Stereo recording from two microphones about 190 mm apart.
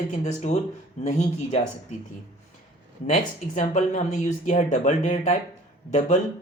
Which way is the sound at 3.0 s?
40° left (ahead or behind).